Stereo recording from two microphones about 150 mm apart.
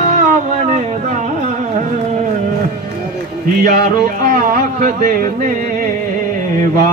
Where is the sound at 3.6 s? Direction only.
65° right (ahead or behind).